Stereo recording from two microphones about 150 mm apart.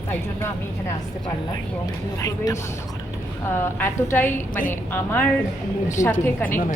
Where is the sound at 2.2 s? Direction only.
20° left (ahead or behind).